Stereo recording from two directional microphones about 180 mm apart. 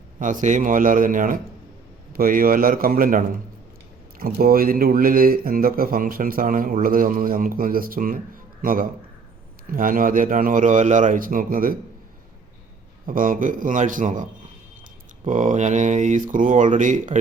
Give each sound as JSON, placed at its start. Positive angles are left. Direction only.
{"t": 0.2, "sound": "speech", "side_deg": -45}
{"t": 13.1, "sound": "speech", "side_deg": -50}